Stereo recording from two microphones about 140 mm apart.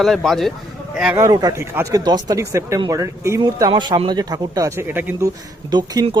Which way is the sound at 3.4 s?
30° right (ahead or behind).